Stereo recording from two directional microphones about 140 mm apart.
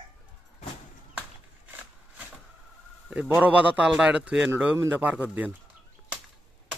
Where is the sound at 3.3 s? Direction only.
10° right (ahead or behind).